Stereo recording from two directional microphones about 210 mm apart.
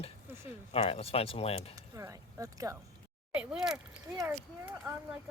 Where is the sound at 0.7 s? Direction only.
30° left (ahead or behind).